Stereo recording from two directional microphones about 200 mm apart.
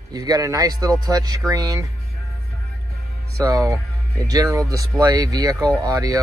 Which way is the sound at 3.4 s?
15° right (ahead or behind).